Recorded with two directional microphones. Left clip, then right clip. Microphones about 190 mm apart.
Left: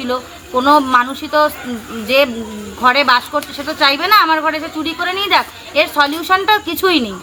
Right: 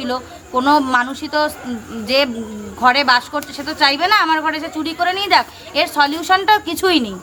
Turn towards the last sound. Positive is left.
turn(degrees=-25)  # may be behind; listen again after turning